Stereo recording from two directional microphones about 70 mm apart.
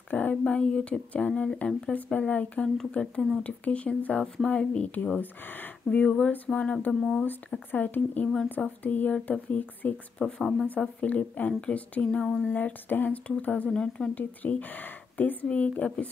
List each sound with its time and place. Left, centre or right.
0.1 s a sound: left
0.5 s a woman's voice: centre
2.0 s a woman's voice: left
5.9 s a woman's voice: centre
10.1 s speech: centre
10.8 s a woman's voice: centre
12.4 s speech: left